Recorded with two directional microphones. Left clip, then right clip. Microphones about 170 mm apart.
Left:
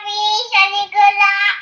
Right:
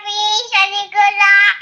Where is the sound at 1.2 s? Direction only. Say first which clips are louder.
Right 4 dB; 50° right (ahead or behind).